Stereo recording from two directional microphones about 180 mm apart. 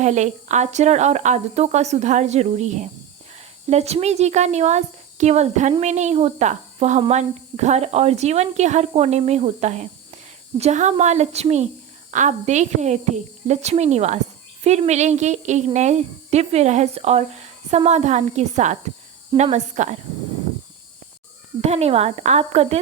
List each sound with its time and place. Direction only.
0.0 s speech: 40° right (ahead or behind)
21.6 s speech: 35° right (ahead or behind)